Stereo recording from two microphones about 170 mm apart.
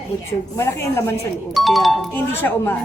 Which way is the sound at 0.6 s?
15° left (ahead or behind).